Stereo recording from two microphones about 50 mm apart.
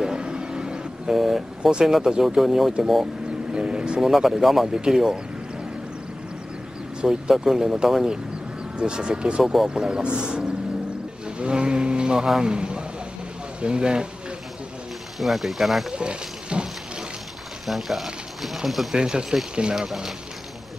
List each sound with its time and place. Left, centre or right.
0.0 s a sound: centre
1.1 s speech: centre
3.5 s speech: centre
4.0 s speech: centre
4.6 s speech: centre
7.0 s speech: centre
9.4 s speech: centre
9.8 s speech: centre
12.5 s vehicle: centre
13.6 s speech: centre
15.1 s speech: centre
15.9 s snake: centre
17.6 s speech: centre
18.9 s speech: centre